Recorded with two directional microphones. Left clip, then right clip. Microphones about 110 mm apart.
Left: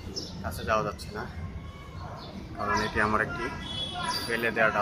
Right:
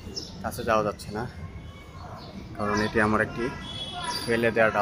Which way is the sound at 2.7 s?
40° right (ahead or behind).